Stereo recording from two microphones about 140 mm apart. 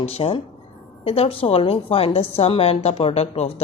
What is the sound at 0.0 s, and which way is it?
A woman's voice, 45° left (ahead or behind).